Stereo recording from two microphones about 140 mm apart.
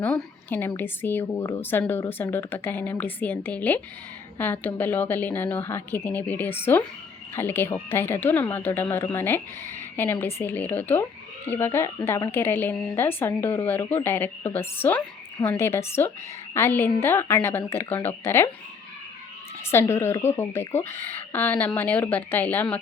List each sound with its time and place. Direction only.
0.0 s a woman's voice: 10° left (ahead or behind)
19.7 s a woman's voice: 15° left (ahead or behind)